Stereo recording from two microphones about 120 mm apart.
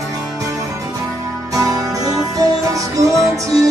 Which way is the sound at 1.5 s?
30° right (ahead or behind).